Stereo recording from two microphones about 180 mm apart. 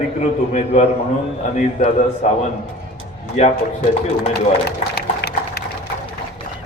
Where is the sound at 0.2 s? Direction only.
40° left (ahead or behind).